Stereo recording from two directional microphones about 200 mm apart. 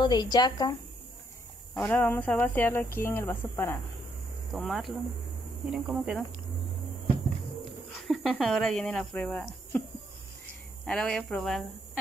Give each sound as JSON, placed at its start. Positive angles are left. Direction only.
{"t": 0.0, "sound": "a woman's voice", "side_deg": 20}
{"t": 1.7, "sound": "speech", "side_deg": 10}
{"t": 4.5, "sound": "speech", "side_deg": 0}
{"t": 8.1, "sound": "speech", "side_deg": 0}
{"t": 10.9, "sound": "speech", "side_deg": 5}